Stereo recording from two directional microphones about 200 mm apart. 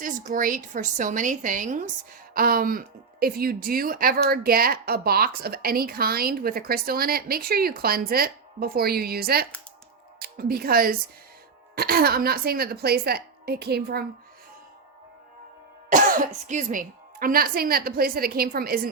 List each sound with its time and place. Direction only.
0.3 s a woman's voice: 45° right (ahead or behind)
15.9 s a woman's voice: 40° right (ahead or behind)